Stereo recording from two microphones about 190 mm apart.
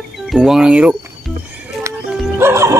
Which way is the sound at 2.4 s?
15° right (ahead or behind).